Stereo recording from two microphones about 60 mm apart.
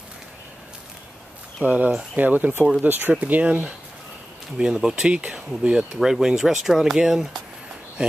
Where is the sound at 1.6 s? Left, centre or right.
Right.